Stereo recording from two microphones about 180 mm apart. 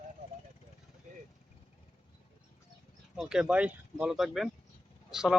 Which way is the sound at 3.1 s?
5° right (ahead or behind).